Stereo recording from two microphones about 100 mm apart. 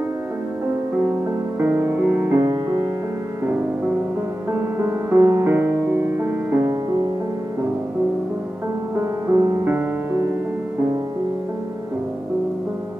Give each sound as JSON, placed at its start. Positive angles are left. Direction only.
{"t": 1.6, "sound": "music", "side_deg": -20}
{"t": 2.3, "sound": "music", "side_deg": -35}
{"t": 4.7, "sound": "music", "side_deg": -25}
{"t": 8.9, "sound": "music", "side_deg": -30}